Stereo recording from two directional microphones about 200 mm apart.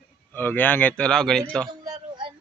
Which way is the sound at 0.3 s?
10° left (ahead or behind).